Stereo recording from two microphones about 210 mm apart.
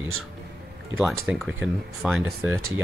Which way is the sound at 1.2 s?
Centre (ahead or behind).